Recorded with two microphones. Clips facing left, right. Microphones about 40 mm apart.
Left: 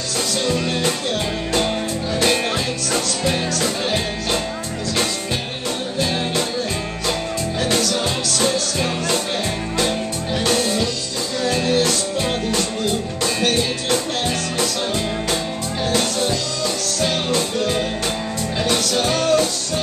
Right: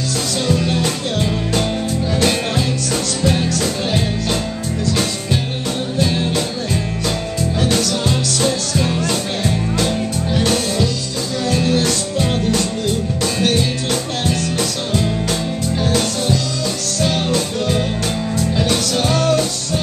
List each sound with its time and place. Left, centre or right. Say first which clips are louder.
0.5 s music: right 3 dB; centre
2.9 s music: right 1 dB; centre
5.9 s music: right 3 dB; centre
7.6 s music: right 1 dB; centre